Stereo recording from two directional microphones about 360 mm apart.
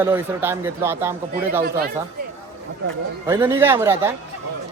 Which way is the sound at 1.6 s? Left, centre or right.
Right.